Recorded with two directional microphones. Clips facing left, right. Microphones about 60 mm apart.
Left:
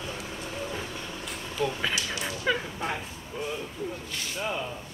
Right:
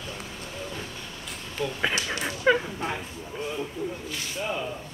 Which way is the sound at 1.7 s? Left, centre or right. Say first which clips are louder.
Right 3 dB; centre.